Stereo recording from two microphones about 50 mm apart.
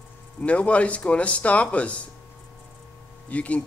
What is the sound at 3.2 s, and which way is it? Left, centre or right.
Speech, left.